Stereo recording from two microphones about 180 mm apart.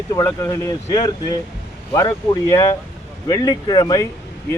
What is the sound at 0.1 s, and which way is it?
Speech, 15° left (ahead or behind).